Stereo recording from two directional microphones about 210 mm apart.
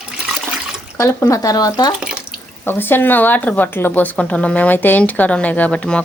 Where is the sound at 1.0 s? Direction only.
15° left (ahead or behind).